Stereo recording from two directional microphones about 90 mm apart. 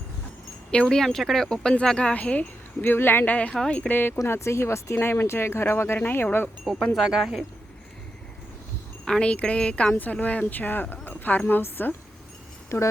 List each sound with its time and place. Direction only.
0.7 s speech: 10° left (ahead or behind)
4.3 s speech: 30° left (ahead or behind)
6.9 s speech: 5° right (ahead or behind)
9.0 s speech: 10° left (ahead or behind)
12.6 s a sound: 30° left (ahead or behind)